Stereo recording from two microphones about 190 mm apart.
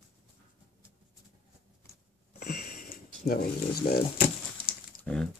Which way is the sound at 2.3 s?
50° left (ahead or behind).